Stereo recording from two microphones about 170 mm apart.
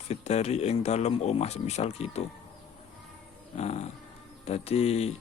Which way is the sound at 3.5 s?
40° left (ahead or behind).